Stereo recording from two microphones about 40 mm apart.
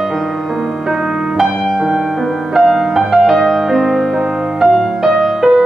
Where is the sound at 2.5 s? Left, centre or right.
Centre.